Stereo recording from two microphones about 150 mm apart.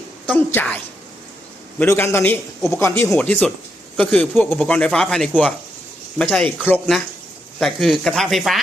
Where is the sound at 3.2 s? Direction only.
5° left (ahead or behind).